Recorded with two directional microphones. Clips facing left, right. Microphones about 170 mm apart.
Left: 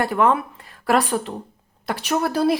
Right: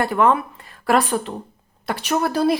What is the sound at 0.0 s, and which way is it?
A woman's voice, 10° left (ahead or behind).